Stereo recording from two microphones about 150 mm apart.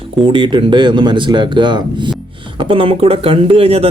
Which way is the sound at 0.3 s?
35° right (ahead or behind).